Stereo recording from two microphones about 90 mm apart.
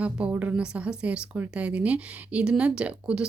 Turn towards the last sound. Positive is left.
turn(degrees=-10)  # may be behind; listen again after turning